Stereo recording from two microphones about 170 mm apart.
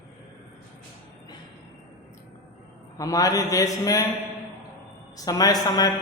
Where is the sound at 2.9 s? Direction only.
20° left (ahead or behind).